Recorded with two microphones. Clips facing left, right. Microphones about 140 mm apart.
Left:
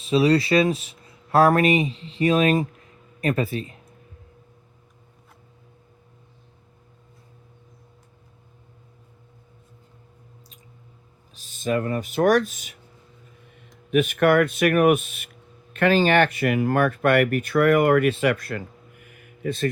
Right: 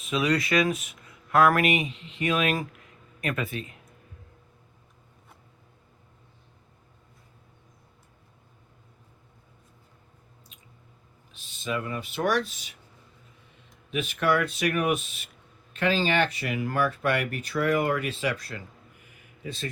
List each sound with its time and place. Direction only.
0.0 s speech: 30° left (ahead or behind)
11.3 s speech: 45° left (ahead or behind)
13.9 s speech: 55° left (ahead or behind)